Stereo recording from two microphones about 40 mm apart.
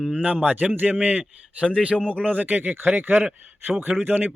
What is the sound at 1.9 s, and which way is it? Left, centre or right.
Speech, left.